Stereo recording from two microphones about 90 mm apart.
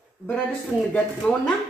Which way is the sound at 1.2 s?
10° left (ahead or behind).